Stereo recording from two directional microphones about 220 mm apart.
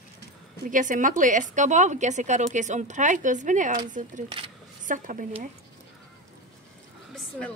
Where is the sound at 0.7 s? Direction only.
35° right (ahead or behind).